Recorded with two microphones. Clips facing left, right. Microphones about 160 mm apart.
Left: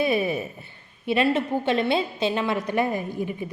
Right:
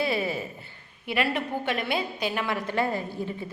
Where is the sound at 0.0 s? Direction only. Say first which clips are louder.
Left 4 dB; 20° left (ahead or behind).